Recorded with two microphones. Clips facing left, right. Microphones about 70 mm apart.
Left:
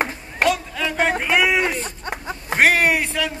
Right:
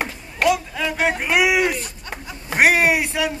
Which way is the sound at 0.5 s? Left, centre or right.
Centre.